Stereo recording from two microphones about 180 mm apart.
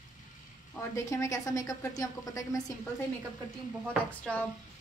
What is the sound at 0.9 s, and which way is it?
A woman's voice, 15° left (ahead or behind).